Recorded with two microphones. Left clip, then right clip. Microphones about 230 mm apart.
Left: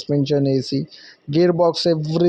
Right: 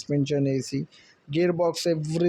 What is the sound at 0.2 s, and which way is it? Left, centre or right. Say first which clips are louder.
Speech: left 7 dB; centre.